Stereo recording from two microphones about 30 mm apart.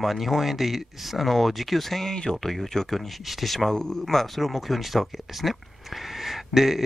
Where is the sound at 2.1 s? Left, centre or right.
Left.